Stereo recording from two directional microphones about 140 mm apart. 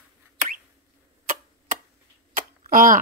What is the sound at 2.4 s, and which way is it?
Tick, 80° right.